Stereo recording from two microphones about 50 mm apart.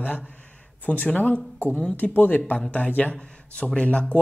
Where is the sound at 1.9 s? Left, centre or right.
Left.